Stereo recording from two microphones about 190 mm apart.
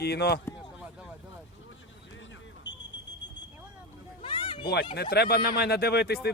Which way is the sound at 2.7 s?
70° left (ahead or behind).